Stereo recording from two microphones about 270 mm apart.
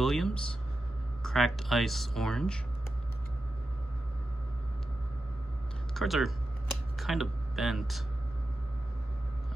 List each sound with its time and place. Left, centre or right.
0.0 s a sound: centre
1.2 s speech: centre
5.9 s speech: centre